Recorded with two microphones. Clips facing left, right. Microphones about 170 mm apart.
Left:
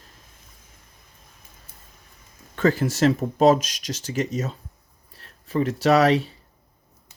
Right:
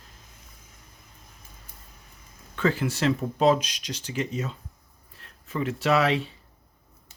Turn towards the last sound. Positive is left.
turn(degrees=40)  # may be behind; listen again after turning